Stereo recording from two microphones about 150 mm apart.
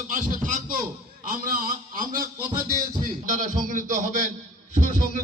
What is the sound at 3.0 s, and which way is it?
A man's voice, 60° right (ahead or behind).